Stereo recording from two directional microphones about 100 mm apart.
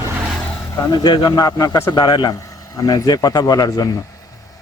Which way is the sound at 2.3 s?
35° left (ahead or behind).